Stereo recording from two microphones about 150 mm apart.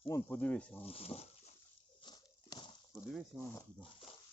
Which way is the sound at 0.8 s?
40° left (ahead or behind).